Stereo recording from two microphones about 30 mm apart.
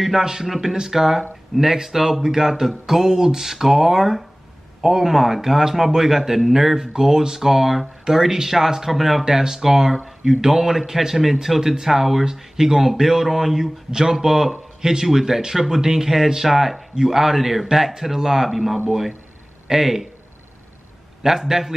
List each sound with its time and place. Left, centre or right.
0.2 s speech: centre
8.9 s speech: centre
9.2 s speech: centre
18.5 s speech: centre
21.2 s speech: centre